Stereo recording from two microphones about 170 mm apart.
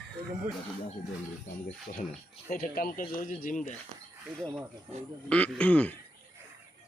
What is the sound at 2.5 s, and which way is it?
Speech, 55° left (ahead or behind).